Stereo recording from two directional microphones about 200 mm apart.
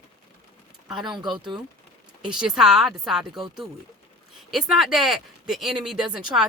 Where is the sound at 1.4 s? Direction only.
25° right (ahead or behind).